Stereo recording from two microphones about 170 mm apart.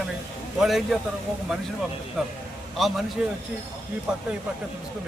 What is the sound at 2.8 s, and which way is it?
Speech, centre (ahead or behind).